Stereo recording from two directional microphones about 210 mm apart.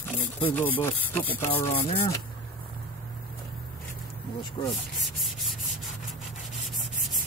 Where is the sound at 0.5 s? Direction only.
10° left (ahead or behind).